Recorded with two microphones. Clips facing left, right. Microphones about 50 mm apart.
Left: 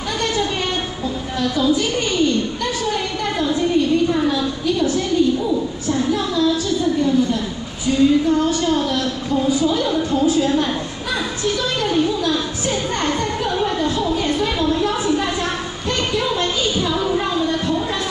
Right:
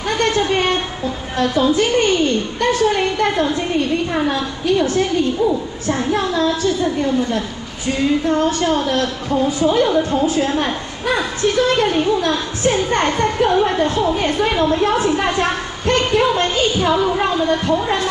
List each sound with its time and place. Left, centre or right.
0.2 s a sound: right
5.9 s a woman's voice: right
16.9 s a woman's voice: right